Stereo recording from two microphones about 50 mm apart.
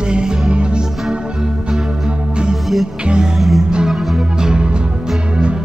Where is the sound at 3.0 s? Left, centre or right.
Centre.